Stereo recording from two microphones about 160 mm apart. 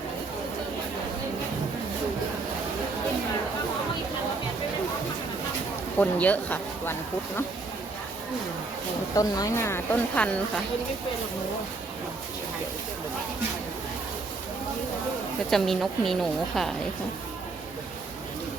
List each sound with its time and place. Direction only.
6.0 s speech: 10° left (ahead or behind)
9.1 s speech: 20° left (ahead or behind)
15.4 s a woman's voice: centre (ahead or behind)